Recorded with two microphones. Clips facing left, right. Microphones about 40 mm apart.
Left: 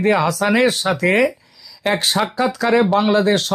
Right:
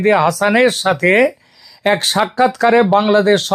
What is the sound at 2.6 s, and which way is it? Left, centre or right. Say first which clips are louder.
Speech: right 3 dB; right.